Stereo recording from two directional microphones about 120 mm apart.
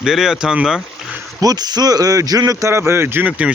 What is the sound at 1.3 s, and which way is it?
Speech, 35° right (ahead or behind).